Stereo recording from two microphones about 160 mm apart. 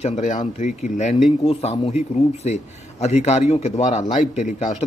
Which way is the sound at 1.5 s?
40° left (ahead or behind).